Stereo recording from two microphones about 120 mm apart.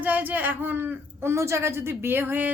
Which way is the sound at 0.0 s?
15° right (ahead or behind).